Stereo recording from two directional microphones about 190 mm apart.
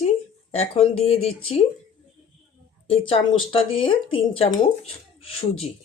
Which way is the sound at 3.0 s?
30° left (ahead or behind).